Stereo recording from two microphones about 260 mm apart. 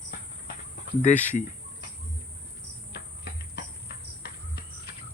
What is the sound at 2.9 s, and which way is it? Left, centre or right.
Cricket, left.